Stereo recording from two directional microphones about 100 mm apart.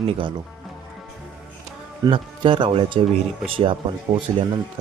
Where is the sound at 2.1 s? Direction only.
55° right (ahead or behind).